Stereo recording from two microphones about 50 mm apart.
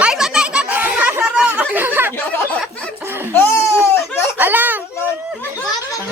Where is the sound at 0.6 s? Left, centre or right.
Right.